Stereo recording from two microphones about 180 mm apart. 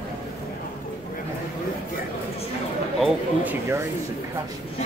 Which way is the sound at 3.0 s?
10° right (ahead or behind).